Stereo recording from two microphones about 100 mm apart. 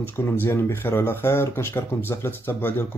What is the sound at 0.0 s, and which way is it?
Speech, 20° left (ahead or behind).